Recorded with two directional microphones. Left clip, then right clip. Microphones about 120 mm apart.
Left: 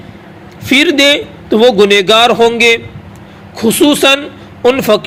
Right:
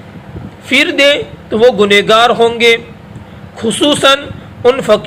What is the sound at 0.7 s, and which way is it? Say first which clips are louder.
A man's voice: left 1 dB; 50° left (ahead or behind).